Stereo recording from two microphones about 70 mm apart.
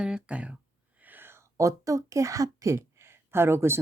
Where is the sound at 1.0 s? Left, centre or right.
Right.